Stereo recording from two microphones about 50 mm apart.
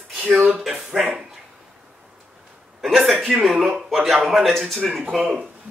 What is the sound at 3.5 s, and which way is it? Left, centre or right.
Speech, centre.